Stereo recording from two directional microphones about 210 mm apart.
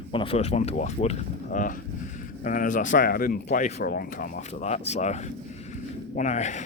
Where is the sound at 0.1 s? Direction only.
25° left (ahead or behind).